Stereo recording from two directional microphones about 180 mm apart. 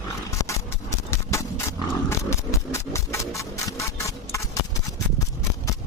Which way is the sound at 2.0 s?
15° left (ahead or behind).